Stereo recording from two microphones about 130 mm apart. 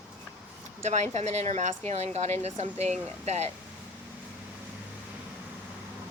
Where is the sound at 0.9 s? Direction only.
60° right (ahead or behind).